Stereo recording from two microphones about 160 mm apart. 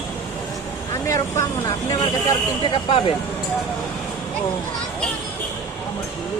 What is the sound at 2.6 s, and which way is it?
Speech, 35° left (ahead or behind).